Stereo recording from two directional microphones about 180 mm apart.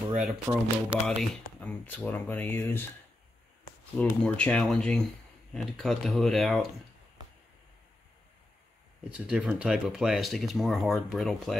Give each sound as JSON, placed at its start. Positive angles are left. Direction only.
{"t": 0.1, "sound": "speech", "side_deg": 0}
{"t": 4.0, "sound": "speech", "side_deg": 5}
{"t": 9.1, "sound": "speech", "side_deg": -5}